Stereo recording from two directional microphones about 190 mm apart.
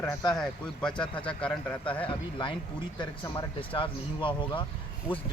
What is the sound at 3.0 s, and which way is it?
Speech, 25° left (ahead or behind).